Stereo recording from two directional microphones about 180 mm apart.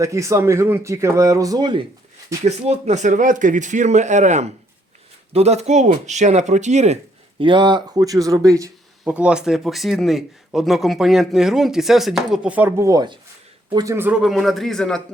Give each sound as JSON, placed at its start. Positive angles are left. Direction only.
{"t": 0.0, "sound": "speech", "side_deg": -15}
{"t": 2.4, "sound": "speech", "side_deg": -40}
{"t": 9.0, "sound": "speech", "side_deg": -5}